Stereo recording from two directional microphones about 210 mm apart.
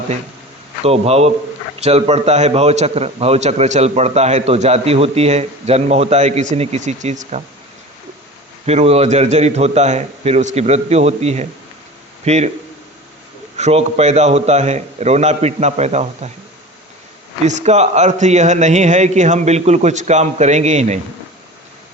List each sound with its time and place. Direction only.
0.9 s a man's voice: 30° right (ahead or behind)
8.6 s a man's voice: 30° right (ahead or behind)
13.6 s a man's voice: 30° right (ahead or behind)
17.4 s a man's voice: 35° right (ahead or behind)